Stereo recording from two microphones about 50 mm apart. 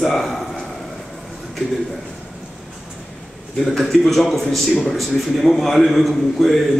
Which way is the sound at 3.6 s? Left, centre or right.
Centre.